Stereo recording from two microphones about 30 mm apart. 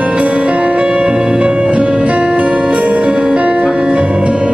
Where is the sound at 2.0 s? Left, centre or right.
Right.